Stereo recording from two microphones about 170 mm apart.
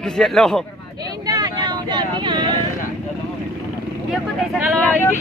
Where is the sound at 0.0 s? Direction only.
5° left (ahead or behind).